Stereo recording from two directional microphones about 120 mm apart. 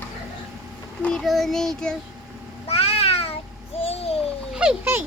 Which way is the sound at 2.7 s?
55° left (ahead or behind).